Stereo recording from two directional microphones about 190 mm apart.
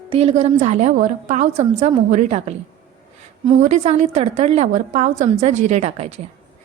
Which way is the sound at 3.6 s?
40° right (ahead or behind).